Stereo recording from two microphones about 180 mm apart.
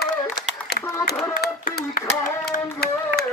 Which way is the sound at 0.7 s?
60° left (ahead or behind).